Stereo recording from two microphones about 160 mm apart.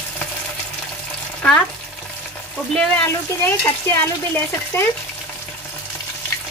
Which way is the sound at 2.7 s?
10° left (ahead or behind).